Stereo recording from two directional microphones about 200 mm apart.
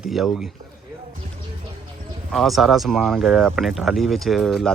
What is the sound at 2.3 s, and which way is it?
Speech, centre (ahead or behind).